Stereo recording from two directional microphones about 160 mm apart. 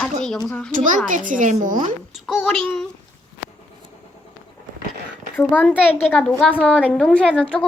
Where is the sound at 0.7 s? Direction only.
50° right (ahead or behind).